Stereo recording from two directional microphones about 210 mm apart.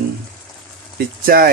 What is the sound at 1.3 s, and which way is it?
Speech, 45° right (ahead or behind).